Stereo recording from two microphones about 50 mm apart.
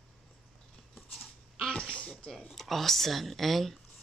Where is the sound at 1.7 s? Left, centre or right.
Centre.